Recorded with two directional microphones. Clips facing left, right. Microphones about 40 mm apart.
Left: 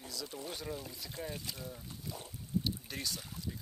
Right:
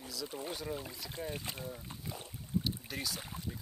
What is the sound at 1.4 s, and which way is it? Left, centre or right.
Speech, right.